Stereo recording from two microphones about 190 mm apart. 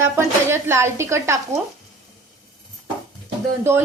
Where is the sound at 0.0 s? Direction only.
15° right (ahead or behind).